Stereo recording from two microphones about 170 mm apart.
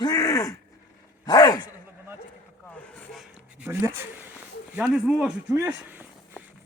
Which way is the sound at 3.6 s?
15° right (ahead or behind).